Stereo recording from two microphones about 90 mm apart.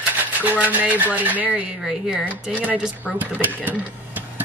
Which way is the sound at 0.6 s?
15° right (ahead or behind).